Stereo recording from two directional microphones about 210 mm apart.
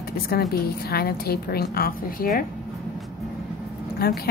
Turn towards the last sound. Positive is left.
turn(degrees=45)  # may be behind; listen again after turning